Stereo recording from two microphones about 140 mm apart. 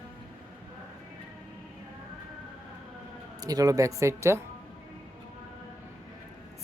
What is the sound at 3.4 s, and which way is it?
Speech, 25° right (ahead or behind).